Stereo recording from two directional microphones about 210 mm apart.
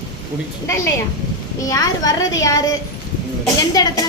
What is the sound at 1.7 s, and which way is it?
Speech, 15° left (ahead or behind).